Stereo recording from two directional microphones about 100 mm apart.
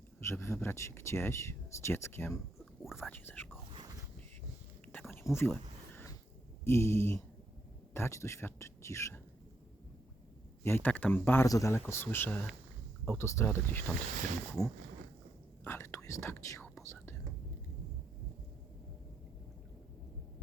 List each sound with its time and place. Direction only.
0.2 s speech: 25° left (ahead or behind)
3.7 s a sound: 50° right (ahead or behind)
5.1 s a sound: 25° left (ahead or behind)
6.7 s speech: 25° left (ahead or behind)
10.6 s speech: 20° left (ahead or behind)
11.4 s speech: 35° left (ahead or behind)
14.6 s speech: 35° left (ahead or behind)